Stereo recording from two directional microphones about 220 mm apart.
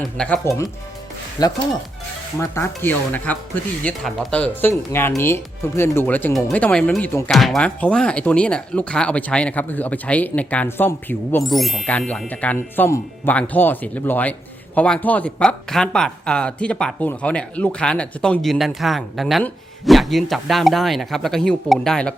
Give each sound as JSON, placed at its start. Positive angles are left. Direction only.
{"t": 0.2, "sound": "speech", "side_deg": 10}